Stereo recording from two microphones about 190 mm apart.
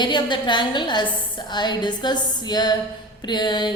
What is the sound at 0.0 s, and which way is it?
A woman's voice, 25° left (ahead or behind).